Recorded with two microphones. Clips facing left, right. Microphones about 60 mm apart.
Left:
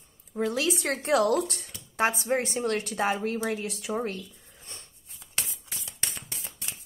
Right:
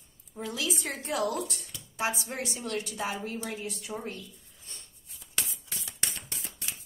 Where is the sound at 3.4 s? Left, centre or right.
Left.